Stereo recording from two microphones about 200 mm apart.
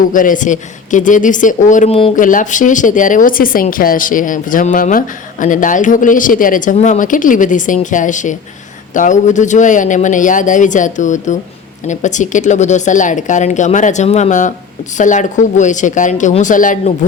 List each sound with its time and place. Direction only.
0.1 s speech: 40° left (ahead or behind)